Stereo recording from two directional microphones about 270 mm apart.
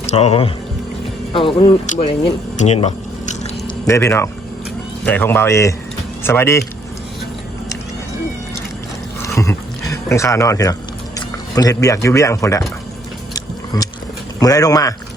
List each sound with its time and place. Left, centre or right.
0.0 s speech: left
2.6 s squish: left
3.8 s speech: centre
9.2 s a sound: centre
11.5 s speech: centre
13.7 s speech: centre